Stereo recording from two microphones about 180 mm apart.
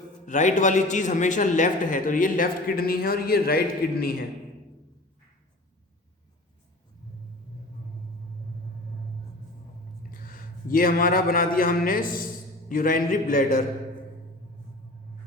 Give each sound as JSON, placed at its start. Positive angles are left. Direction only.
{"t": 0.3, "sound": "a man's voice", "side_deg": 45}
{"t": 10.1, "sound": "a man's voice", "side_deg": 50}